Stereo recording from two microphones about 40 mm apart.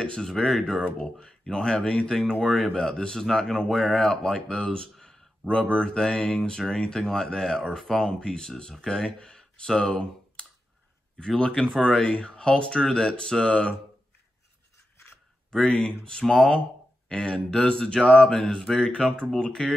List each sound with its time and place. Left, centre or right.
0.0 s speech: left
0.3 s speech: centre
2.4 s speech: centre
2.7 s speech: centre
4.9 s a sound: centre
5.8 s speech: centre
8.1 s speech: centre
11.6 s speech: centre
12.0 s speech: left
15.5 s speech: centre
17.1 s speech: left